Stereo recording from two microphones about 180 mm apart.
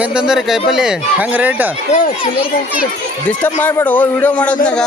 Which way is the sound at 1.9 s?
45° left (ahead or behind).